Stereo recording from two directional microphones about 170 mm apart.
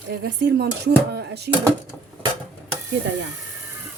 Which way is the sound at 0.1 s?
70° right (ahead or behind).